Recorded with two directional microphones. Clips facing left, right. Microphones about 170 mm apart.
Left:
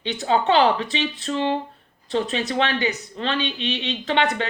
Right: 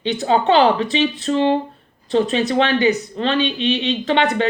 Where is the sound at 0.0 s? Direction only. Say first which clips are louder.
Right 4 dB; 30° right (ahead or behind).